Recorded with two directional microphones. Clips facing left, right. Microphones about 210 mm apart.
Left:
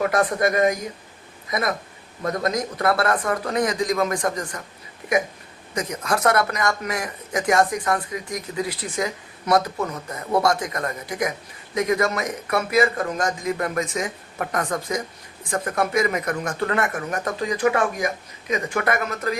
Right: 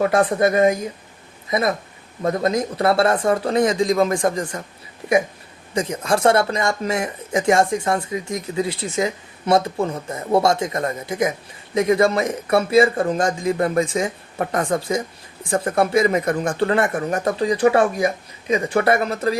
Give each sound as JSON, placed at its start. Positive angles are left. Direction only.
{"t": 0.0, "sound": "speech", "side_deg": -30}
{"t": 5.7, "sound": "speech", "side_deg": -30}